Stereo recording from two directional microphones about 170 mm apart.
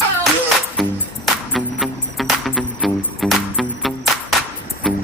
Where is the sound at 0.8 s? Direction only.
Centre (ahead or behind).